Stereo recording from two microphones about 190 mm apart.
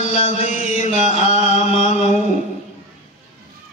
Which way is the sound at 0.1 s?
40° left (ahead or behind).